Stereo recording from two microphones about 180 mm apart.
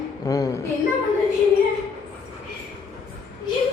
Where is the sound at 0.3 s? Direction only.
20° left (ahead or behind).